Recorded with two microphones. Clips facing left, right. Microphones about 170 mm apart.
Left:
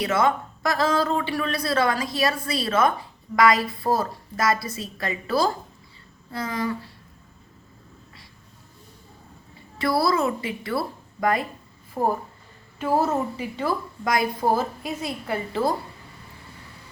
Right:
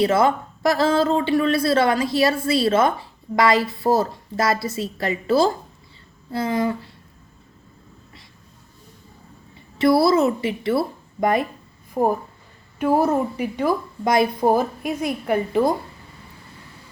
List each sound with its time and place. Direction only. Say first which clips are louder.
0.0 s speech: right 4 dB; 30° right (ahead or behind)
9.7 s a woman's voice: right 6 dB; 25° right (ahead or behind)